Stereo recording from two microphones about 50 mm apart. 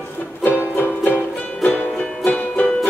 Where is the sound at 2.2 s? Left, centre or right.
Left.